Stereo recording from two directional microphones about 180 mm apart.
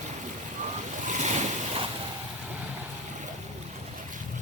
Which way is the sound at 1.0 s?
40° right (ahead or behind).